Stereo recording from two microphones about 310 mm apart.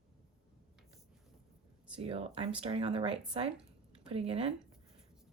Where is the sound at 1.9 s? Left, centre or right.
Centre.